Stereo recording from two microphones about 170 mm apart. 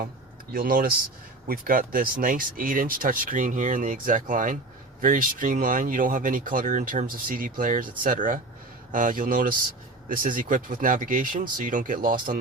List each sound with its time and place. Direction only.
0.5 s speech: 55° right (ahead or behind)